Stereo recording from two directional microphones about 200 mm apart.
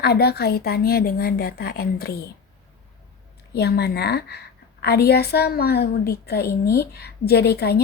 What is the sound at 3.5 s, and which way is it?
A woman's voice, 55° left (ahead or behind).